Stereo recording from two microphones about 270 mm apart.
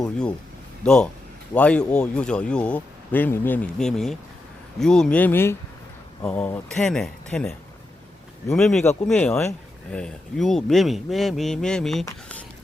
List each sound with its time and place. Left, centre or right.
0.9 s speech: centre